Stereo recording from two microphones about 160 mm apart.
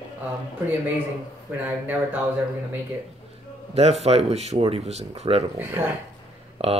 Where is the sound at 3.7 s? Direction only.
40° right (ahead or behind).